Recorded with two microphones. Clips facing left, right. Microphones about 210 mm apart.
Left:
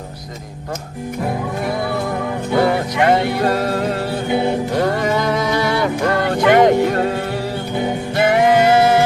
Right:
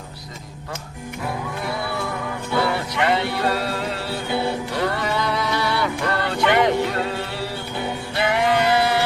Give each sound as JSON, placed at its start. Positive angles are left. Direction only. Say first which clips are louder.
{"t": 2.6, "sound": "music", "louder": "left 6 dB", "side_deg": 45}
{"t": 4.3, "sound": "music", "louder": "left 5 dB", "side_deg": 20}
{"t": 4.7, "sound": "music", "louder": "left 6 dB", "side_deg": 45}